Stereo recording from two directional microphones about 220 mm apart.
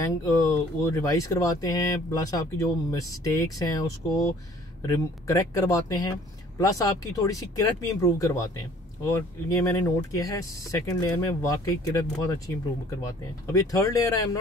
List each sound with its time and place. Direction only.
0.2 s speech: 15° left (ahead or behind)
4.8 s speech: 15° left (ahead or behind)